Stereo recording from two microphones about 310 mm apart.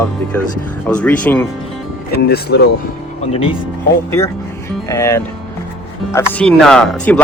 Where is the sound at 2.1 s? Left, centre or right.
Left.